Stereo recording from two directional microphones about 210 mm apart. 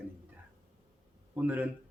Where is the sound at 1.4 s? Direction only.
10° right (ahead or behind).